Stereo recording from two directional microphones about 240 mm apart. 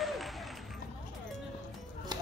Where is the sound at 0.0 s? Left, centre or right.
Centre.